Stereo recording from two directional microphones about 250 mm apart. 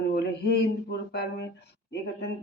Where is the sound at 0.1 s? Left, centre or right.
Left.